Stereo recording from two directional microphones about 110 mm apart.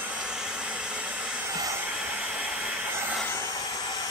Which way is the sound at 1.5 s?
30° right (ahead or behind).